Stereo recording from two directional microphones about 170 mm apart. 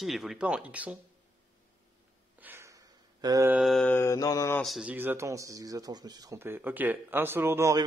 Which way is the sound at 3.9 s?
15° left (ahead or behind).